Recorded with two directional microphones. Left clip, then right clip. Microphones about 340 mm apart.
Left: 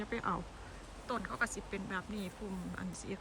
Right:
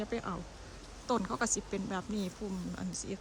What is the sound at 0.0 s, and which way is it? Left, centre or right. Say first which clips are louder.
Speech: even; centre.